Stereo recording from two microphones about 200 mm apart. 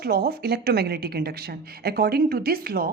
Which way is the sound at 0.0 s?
50° right (ahead or behind).